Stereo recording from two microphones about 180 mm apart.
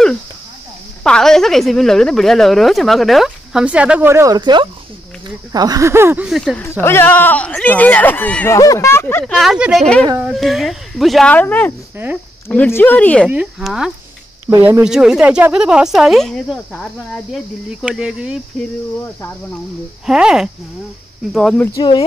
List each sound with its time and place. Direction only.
1.0 s speech: 5° left (ahead or behind); by 4.4 s 15° right (ahead or behind)
4.4 s speech: 25° right (ahead or behind)
6.2 s speech: centre (ahead or behind)
6.8 s speech: 15° left (ahead or behind)
9.2 s speech: centre (ahead or behind)
13.3 s speech: 5° right (ahead or behind)
20.1 s speech: 5° right (ahead or behind)
21.7 s speech: 25° left (ahead or behind)